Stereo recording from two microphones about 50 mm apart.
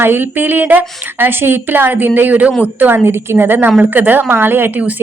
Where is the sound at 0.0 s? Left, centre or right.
Right.